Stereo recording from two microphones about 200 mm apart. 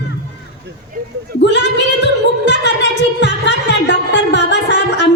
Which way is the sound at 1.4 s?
60° left (ahead or behind).